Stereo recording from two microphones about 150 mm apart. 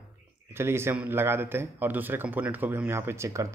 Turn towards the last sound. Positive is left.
turn(degrees=-20)  # may be behind; listen again after turning